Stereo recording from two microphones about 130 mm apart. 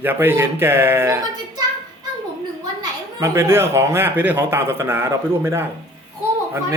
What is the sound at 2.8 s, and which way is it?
Speech, 25° right (ahead or behind).